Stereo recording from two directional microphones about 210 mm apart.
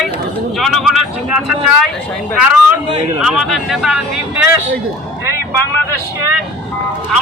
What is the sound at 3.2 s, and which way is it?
Speech, 5° right (ahead or behind).